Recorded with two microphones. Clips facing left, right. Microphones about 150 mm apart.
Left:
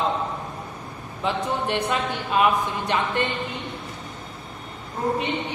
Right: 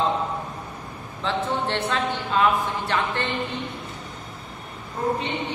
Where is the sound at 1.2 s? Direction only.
15° left (ahead or behind).